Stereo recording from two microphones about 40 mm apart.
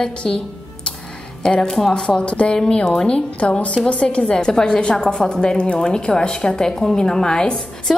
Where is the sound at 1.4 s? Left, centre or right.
Centre.